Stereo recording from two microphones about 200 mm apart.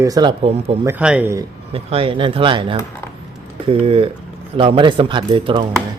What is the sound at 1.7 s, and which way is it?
A man's voice, 30° right (ahead or behind).